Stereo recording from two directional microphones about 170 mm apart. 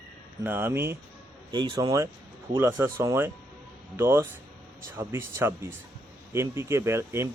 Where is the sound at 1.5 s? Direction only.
25° right (ahead or behind).